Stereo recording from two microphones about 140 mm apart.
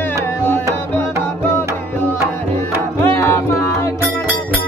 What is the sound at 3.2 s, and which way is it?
Music, 20° left (ahead or behind).